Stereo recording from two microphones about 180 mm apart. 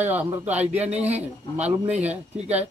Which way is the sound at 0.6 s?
35° right (ahead or behind).